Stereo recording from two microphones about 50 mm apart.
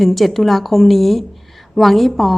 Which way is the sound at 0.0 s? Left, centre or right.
Centre.